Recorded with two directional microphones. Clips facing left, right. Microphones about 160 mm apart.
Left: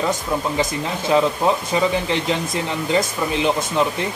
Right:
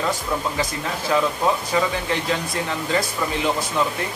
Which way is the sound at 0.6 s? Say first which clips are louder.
Left 3 dB; 20° left (ahead or behind).